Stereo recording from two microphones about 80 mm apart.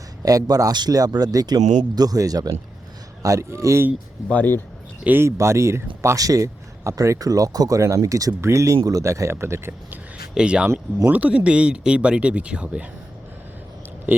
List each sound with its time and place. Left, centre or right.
0.3 s speech: right
4.3 s speech: left
5.0 s speech: right
7.8 s speech: right
10.3 s speech: centre